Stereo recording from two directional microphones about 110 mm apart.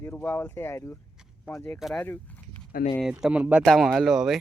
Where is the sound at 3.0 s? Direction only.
5° right (ahead or behind).